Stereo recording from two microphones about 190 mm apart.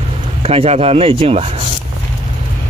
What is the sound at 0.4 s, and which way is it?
Speech, 30° right (ahead or behind).